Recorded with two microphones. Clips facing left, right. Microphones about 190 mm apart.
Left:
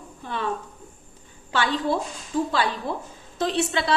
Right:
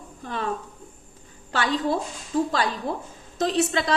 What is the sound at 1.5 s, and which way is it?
A woman's voice, 40° right (ahead or behind).